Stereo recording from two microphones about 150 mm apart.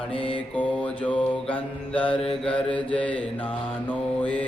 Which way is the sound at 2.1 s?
40° left (ahead or behind).